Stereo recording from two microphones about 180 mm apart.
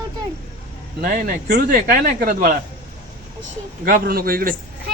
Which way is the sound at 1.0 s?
55° right (ahead or behind).